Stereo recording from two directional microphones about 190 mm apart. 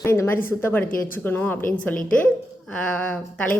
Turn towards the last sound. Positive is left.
turn(degrees=5)  # may be behind; listen again after turning